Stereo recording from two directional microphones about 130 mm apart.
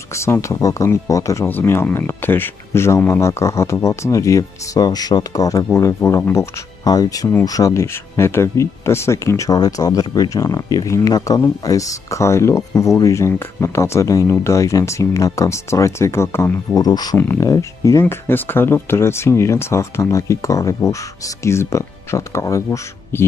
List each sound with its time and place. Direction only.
0.1 s speech: 20° left (ahead or behind)
17.2 s speech: 15° left (ahead or behind)
17.5 s speech: 25° left (ahead or behind)